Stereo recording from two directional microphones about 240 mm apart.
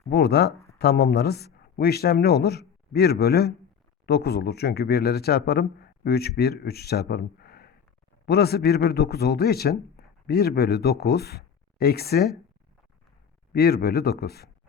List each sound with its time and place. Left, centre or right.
0.1 s a man's voice: left
13.5 s a man's voice: left